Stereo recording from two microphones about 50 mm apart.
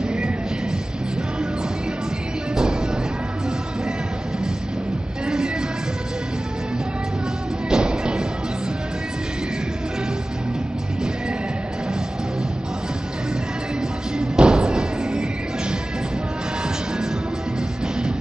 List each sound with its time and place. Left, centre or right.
5.2 s music: centre
7.7 s music: centre
14.1 s music: centre